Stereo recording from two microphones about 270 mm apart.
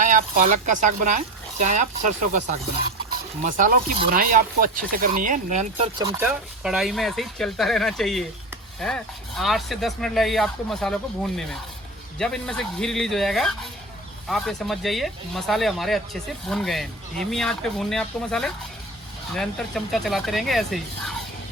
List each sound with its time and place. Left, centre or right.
0.0 s speech: right
6.0 s speech: centre
6.2 s speech: centre